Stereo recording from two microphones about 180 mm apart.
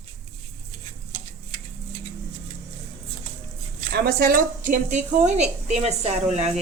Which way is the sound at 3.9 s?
60° right (ahead or behind).